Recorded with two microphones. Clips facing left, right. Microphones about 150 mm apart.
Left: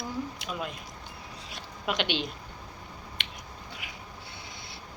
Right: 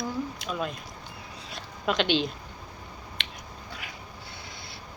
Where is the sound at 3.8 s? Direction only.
15° left (ahead or behind).